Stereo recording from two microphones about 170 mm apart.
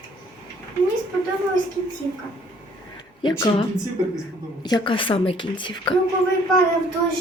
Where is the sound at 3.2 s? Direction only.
30° left (ahead or behind).